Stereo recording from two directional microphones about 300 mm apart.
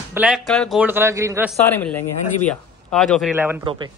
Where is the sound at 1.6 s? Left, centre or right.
Centre.